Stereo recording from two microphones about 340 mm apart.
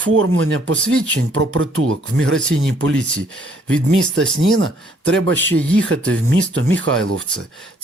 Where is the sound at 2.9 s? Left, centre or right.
Centre.